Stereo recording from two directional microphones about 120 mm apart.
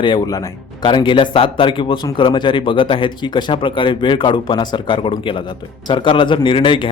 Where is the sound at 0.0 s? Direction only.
35° left (ahead or behind).